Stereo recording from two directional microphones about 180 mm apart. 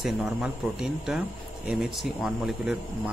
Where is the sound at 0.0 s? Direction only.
Centre (ahead or behind).